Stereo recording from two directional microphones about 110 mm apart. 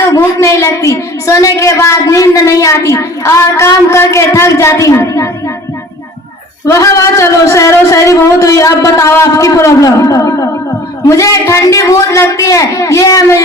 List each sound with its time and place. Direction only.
0.0 s a woman's voice: 25° left (ahead or behind)
6.7 s a woman's voice: 30° left (ahead or behind)